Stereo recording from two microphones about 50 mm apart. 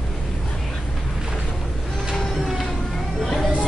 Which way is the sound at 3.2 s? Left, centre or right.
Centre.